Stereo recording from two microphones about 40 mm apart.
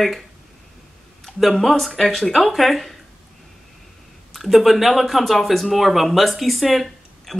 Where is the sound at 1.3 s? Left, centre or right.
Left.